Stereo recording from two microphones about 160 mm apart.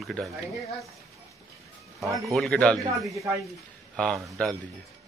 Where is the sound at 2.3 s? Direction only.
5° left (ahead or behind).